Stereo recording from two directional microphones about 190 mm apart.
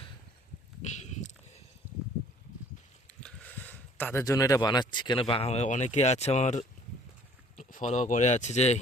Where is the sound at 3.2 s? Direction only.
10° left (ahead or behind).